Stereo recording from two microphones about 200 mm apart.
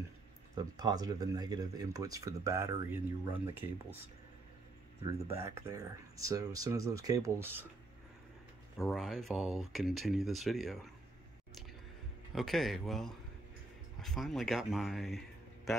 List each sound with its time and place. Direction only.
0.6 s speech: 20° right (ahead or behind)
5.3 s speech: 15° right (ahead or behind)
8.7 s speech: centre (ahead or behind)
12.4 s speech: centre (ahead or behind)